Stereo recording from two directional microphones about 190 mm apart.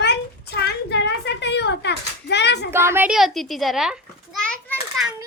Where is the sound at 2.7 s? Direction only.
15° right (ahead or behind).